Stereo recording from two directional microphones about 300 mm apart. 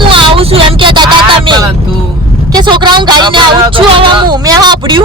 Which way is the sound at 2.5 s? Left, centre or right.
Centre.